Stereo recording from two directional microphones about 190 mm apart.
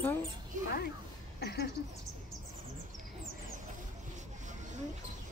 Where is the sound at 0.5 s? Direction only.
45° right (ahead or behind).